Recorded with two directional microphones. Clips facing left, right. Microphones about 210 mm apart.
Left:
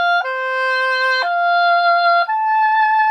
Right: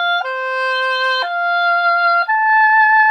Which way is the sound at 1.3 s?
35° left (ahead or behind).